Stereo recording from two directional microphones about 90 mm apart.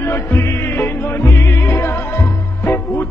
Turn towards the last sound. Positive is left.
turn(degrees=25)  # may be behind; listen again after turning